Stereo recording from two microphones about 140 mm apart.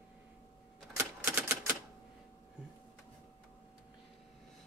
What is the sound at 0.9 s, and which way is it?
Typewriter, 15° right (ahead or behind).